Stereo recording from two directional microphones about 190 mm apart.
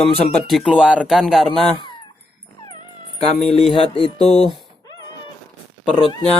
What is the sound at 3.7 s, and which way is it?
Music, 30° left (ahead or behind).